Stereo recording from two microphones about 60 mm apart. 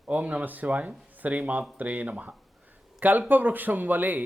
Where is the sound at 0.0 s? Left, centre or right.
Right.